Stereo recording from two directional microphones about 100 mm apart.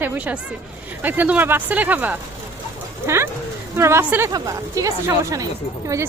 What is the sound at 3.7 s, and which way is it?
Speech, 25° right (ahead or behind).